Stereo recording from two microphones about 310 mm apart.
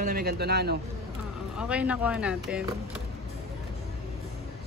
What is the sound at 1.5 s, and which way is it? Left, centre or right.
Speech, centre.